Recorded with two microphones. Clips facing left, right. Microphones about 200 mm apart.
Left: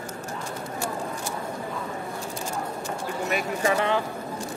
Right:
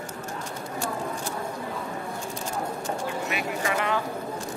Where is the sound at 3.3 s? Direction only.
35° left (ahead or behind).